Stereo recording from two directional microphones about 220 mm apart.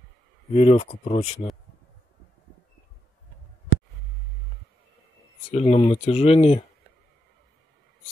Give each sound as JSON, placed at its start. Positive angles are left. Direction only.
{"t": 0.5, "sound": "speech", "side_deg": 25}
{"t": 5.5, "sound": "speech", "side_deg": 25}